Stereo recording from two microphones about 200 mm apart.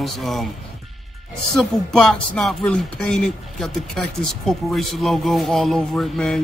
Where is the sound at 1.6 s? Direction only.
Centre (ahead or behind).